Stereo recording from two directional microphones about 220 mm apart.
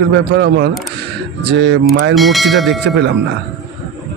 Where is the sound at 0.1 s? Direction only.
50° right (ahead or behind).